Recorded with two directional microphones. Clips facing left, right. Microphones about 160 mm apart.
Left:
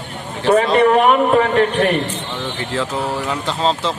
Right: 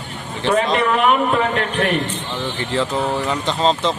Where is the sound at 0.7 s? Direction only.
40° left (ahead or behind).